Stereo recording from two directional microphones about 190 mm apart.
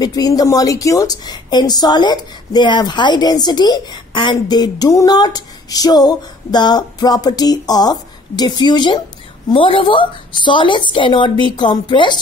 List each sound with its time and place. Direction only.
0.0 s a woman's voice: 20° left (ahead or behind)